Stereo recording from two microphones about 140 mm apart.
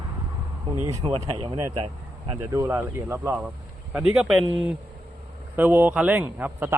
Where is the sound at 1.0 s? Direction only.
40° right (ahead or behind).